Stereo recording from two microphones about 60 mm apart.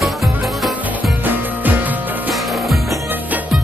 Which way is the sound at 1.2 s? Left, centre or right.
Right.